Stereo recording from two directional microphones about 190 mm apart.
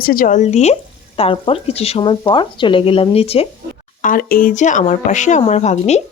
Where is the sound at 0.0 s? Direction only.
50° left (ahead or behind); by 3.5 s 30° left (ahead or behind).